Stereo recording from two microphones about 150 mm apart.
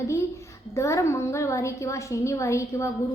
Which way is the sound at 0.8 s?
20° left (ahead or behind).